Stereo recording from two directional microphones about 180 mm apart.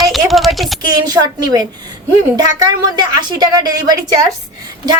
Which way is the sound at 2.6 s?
20° right (ahead or behind).